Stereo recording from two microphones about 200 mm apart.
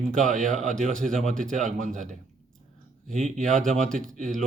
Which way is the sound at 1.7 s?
40° right (ahead or behind).